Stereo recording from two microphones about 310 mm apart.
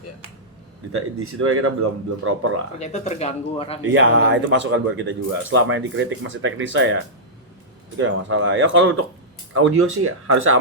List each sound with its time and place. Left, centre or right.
0.9 s speech: right
2.7 s speech: left
3.9 s speech: right